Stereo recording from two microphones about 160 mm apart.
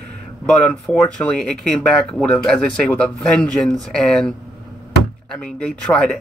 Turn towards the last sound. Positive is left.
turn(degrees=5)  # may be behind; listen again after turning